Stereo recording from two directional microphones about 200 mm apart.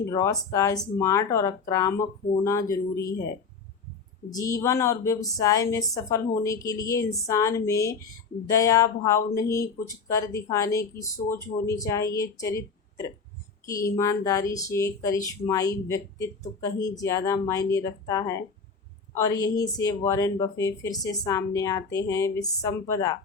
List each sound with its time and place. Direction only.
0.0 s speech: 15° left (ahead or behind)
4.3 s speech: 15° left (ahead or behind)